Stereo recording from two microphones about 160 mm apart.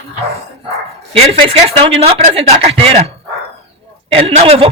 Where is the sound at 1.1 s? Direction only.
35° right (ahead or behind).